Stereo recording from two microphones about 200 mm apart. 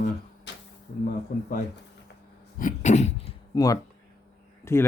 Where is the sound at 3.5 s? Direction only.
20° left (ahead or behind).